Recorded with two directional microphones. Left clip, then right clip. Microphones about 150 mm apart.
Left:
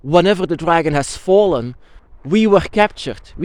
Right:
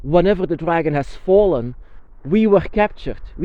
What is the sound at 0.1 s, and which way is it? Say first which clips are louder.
Speech: left 2 dB; 25° left (ahead or behind).